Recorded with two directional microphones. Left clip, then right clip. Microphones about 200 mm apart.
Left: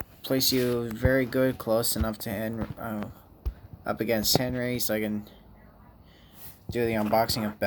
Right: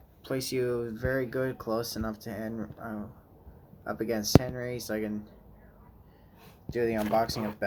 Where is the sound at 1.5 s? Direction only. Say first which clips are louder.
Left 6 dB; 35° left (ahead or behind).